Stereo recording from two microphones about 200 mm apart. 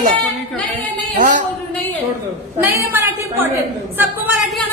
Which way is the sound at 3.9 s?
10° right (ahead or behind).